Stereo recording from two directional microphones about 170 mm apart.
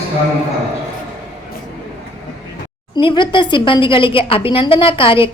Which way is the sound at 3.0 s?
30° left (ahead or behind).